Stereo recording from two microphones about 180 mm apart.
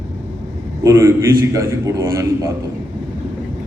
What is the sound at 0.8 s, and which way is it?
A man's voice, 15° right (ahead or behind).